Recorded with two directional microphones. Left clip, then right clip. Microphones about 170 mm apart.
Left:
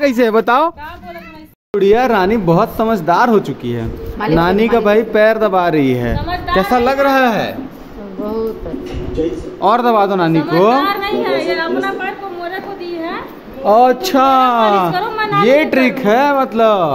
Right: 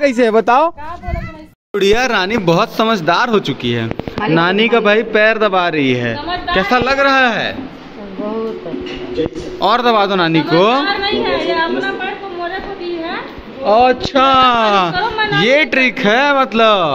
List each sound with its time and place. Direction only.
0.0 s speech: centre (ahead or behind)
1.8 s speech: centre (ahead or behind)
4.4 s speech: 20° left (ahead or behind)
9.6 s speech: 10° left (ahead or behind)
10.9 s a woman's voice: 30° left (ahead or behind)
13.7 s speech: 50° left (ahead or behind)
14.4 s speech: 15° left (ahead or behind)
15.0 s speech: 25° left (ahead or behind)
15.3 s speech: 10° left (ahead or behind)